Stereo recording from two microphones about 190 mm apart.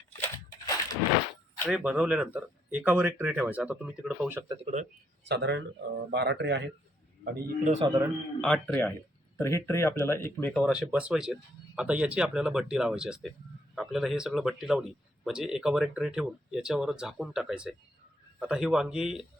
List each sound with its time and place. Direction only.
0.2 s crushing: 20° left (ahead or behind)
1.7 s speech: 5° right (ahead or behind)
4.7 s speech: 30° right (ahead or behind)
5.2 s speech: 65° right (ahead or behind)
7.4 s a man's voice: 40° right (ahead or behind)
8.4 s a man's voice: 5° left (ahead or behind)